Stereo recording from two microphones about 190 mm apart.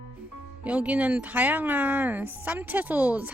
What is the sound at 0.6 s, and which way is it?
Speech, 5° right (ahead or behind).